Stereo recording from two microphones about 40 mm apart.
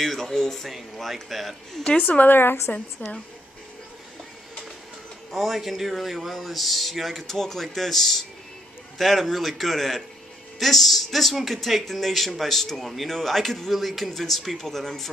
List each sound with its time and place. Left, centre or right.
0.0 s speech: centre
0.7 s speech: centre
2.0 s a woman's voice: left
5.3 s speech: centre